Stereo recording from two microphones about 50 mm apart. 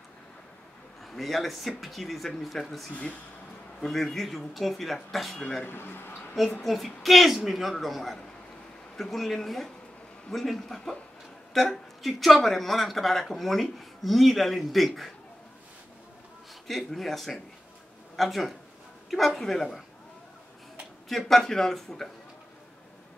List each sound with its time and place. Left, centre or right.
1.0 s speech: centre
5.3 s speech: centre
5.7 s speech: left
6.6 s speech: centre
16.6 s speech: centre
21.3 s speech: centre